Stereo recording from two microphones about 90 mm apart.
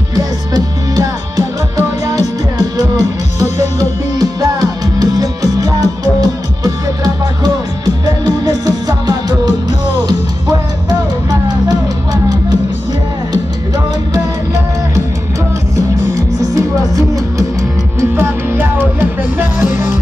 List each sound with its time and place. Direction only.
0.1 s music: 45° right (ahead or behind)
4.2 s music: 45° right (ahead or behind)
7.4 s music: 50° right (ahead or behind)
10.9 s music: 50° right (ahead or behind)
16.2 s music: 40° right (ahead or behind)
18.1 s music: 25° right (ahead or behind)